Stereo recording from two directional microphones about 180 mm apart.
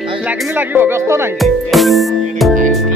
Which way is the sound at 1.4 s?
Centre (ahead or behind).